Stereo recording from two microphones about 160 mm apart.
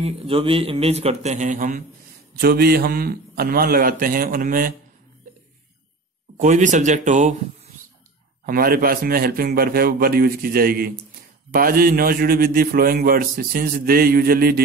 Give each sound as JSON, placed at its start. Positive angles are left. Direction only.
{"t": 0.0, "sound": "speech", "side_deg": -35}
{"t": 2.3, "sound": "a man's voice", "side_deg": -75}
{"t": 6.3, "sound": "speech", "side_deg": -50}
{"t": 8.5, "sound": "a man's voice", "side_deg": -65}